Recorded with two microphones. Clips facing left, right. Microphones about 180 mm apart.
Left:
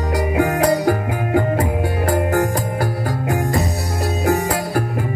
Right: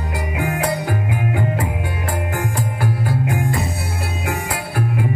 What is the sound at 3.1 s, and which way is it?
Music, 40° left (ahead or behind).